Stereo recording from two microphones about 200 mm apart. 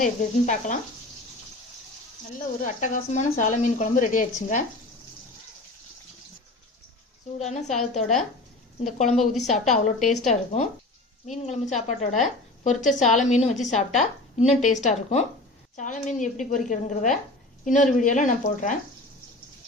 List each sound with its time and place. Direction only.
0.0 s a woman's voice: 40° left (ahead or behind)
2.6 s a woman's voice: 40° left (ahead or behind)
7.3 s a woman's voice: 35° left (ahead or behind)